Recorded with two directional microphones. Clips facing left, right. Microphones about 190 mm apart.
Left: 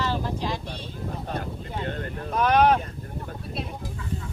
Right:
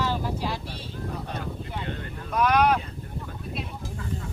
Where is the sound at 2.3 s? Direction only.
30° left (ahead or behind).